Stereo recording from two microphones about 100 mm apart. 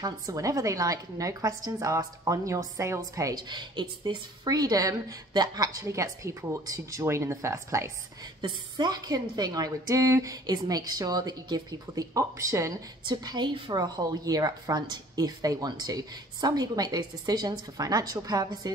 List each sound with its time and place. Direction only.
0.0 s a woman's voice: 35° right (ahead or behind)
3.4 s speech: 50° right (ahead or behind)
4.5 s a woman's voice: 40° right (ahead or behind)
8.4 s a woman's voice: 45° right (ahead or behind)
13.0 s a woman's voice: 45° right (ahead or behind)